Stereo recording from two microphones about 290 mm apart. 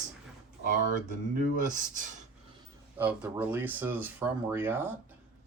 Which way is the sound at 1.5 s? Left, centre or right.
Right.